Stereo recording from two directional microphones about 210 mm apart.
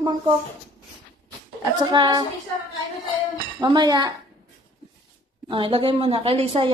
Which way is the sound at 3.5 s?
20° right (ahead or behind).